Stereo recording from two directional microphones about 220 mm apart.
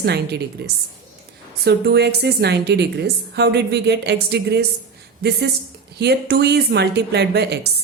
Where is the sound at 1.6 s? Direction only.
50° right (ahead or behind).